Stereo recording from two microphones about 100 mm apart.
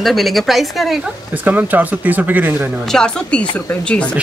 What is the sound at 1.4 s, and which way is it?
Speech, 15° right (ahead or behind).